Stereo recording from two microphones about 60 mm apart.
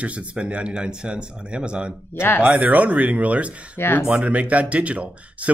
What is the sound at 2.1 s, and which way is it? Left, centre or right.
Speech, left.